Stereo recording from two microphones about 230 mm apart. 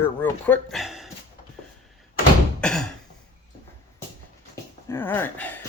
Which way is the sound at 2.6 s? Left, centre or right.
Centre.